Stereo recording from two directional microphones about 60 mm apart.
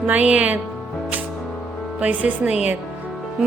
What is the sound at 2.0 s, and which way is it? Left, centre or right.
Music, right.